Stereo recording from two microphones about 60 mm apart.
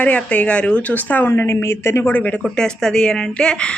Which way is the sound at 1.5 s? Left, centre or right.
Left.